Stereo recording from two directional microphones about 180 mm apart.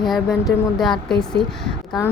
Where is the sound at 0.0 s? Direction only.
Centre (ahead or behind).